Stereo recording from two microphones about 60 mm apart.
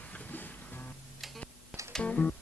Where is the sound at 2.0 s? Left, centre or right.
Left.